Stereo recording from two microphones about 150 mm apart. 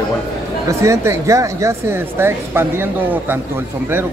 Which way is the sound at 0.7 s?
20° right (ahead or behind).